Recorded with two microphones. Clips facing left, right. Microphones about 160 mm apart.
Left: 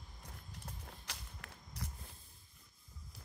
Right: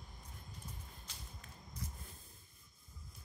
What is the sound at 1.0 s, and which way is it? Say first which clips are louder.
Whip: left 3 dB; 75° left (ahead or behind).